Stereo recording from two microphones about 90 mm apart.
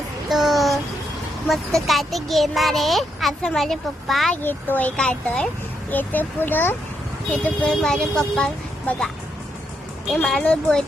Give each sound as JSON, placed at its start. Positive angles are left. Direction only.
{"t": 0.3, "sound": "child singing", "side_deg": 0}
{"t": 1.5, "sound": "a child's voice", "side_deg": 0}
{"t": 4.4, "sound": "a child's voice", "side_deg": 20}
{"t": 4.9, "sound": "a child's voice", "side_deg": 10}
{"t": 7.4, "sound": "speech", "side_deg": 10}
{"t": 10.2, "sound": "speech", "side_deg": 10}